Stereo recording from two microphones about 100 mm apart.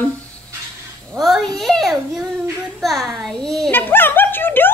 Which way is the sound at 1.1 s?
Centre (ahead or behind).